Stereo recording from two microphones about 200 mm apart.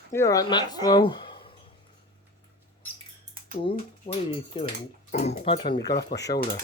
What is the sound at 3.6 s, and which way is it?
Speech, 25° left (ahead or behind).